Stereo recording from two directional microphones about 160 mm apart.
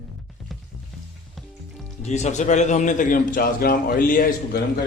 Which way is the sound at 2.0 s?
45° left (ahead or behind).